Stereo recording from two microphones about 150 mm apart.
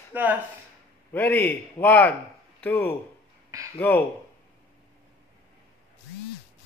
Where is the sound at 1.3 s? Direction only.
15° left (ahead or behind).